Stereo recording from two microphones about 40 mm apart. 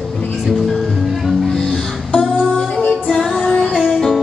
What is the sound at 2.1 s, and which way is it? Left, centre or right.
Music, left.